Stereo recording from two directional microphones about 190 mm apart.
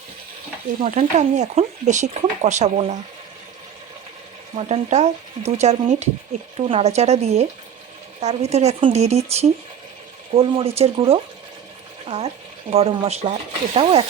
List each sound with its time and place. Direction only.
0.8 s speech: 40° right (ahead or behind)
4.5 s speech: 35° right (ahead or behind)